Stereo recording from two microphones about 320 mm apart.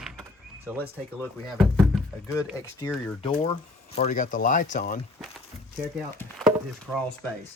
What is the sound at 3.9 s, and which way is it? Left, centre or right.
Speech, left.